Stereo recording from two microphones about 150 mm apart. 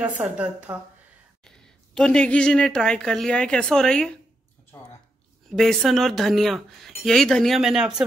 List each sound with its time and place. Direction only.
0.2 s speech: 10° right (ahead or behind)
2.0 s speech: 5° left (ahead or behind)
4.7 s a sound: 15° left (ahead or behind)
5.5 s speech: centre (ahead or behind)